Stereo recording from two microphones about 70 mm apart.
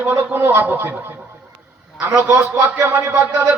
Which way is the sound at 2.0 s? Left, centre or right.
Right.